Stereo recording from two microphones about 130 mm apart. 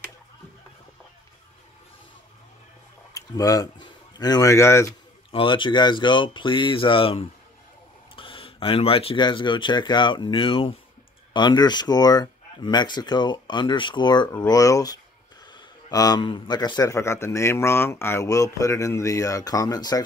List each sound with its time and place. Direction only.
3.2 s speech: 25° left (ahead or behind)
5.3 s speech: 40° left (ahead or behind)